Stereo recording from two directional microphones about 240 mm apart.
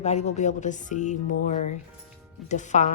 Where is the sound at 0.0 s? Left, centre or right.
Left.